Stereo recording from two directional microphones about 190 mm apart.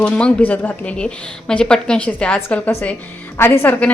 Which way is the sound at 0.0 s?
5° left (ahead or behind).